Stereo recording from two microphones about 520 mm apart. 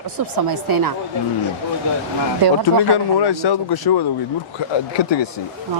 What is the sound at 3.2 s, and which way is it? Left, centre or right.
Speech, left.